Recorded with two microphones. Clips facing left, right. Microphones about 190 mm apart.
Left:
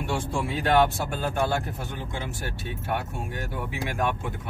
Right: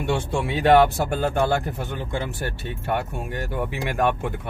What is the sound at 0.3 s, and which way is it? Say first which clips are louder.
Speech: right 7 dB; 70° right (ahead or behind).